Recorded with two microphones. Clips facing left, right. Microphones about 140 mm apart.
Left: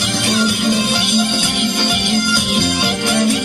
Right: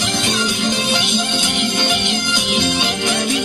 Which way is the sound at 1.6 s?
10° left (ahead or behind).